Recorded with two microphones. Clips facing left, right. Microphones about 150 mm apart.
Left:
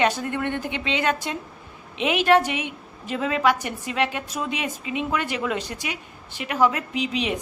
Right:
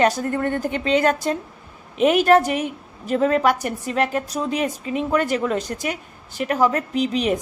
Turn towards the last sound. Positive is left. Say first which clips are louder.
# right 5 dB
turn(degrees=-40)  # may be behind; listen again after turning